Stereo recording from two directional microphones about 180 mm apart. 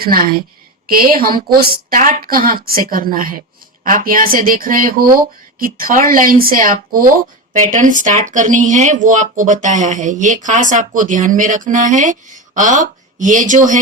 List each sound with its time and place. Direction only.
0.0 s a woman's voice: 55° right (ahead or behind)